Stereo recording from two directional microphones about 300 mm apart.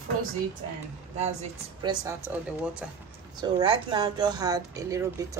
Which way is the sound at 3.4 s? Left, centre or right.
Centre.